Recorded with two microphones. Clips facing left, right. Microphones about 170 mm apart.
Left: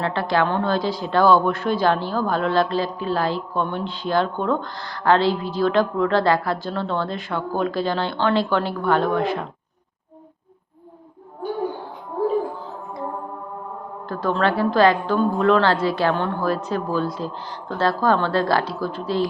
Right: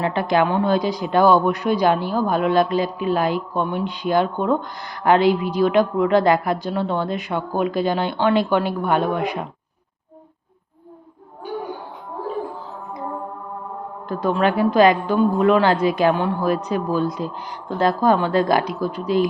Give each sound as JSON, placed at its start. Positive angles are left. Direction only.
{"t": 0.0, "sound": "speech", "side_deg": -15}
{"t": 14.1, "sound": "speech", "side_deg": -15}